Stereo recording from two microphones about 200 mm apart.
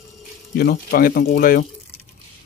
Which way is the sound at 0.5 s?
50° left (ahead or behind).